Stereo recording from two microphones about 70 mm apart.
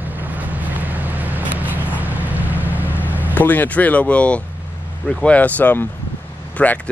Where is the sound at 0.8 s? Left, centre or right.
Right.